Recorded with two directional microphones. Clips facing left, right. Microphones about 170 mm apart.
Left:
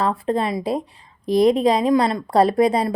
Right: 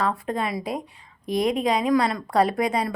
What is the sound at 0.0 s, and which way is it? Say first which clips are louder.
A woman's voice: left 5 dB; 30° left (ahead or behind).